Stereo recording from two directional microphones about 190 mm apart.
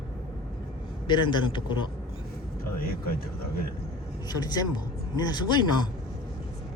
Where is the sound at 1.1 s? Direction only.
25° left (ahead or behind).